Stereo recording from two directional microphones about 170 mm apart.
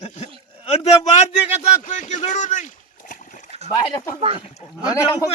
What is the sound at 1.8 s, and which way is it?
Speech, 45° left (ahead or behind).